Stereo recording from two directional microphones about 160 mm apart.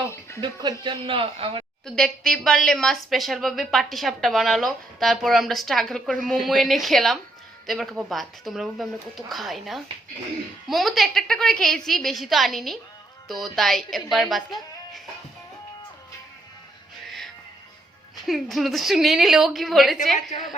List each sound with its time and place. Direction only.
0.1 s music: 15° left (ahead or behind)
0.4 s a woman's voice: 30° right (ahead or behind)
1.8 s a woman's voice: 5° left (ahead or behind)
18.3 s a woman's voice: centre (ahead or behind)